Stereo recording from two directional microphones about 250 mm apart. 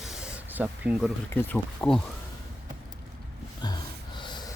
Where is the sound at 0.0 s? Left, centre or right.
Centre.